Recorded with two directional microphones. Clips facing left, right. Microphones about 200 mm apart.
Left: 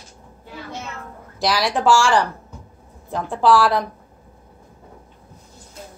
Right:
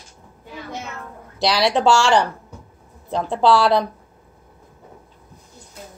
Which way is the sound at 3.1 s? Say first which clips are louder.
Even; 25° right (ahead or behind).